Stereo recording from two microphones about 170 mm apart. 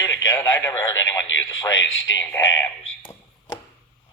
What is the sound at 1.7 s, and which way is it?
Speech, 90° left.